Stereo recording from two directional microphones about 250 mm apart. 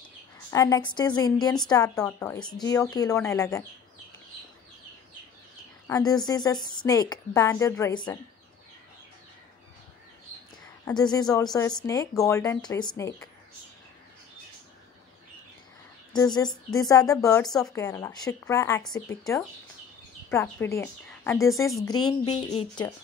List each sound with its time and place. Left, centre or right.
0.5 s a woman's voice: centre
5.9 s a woman's voice: centre
10.9 s a woman's voice: centre
16.1 s a woman's voice: centre
21.8 s a woman's voice: centre